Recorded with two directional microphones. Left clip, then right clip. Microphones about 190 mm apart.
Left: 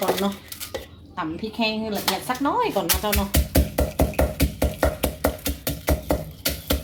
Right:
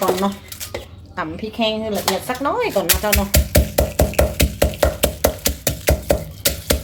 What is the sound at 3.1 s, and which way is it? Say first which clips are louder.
Music: right 6 dB; centre (ahead or behind).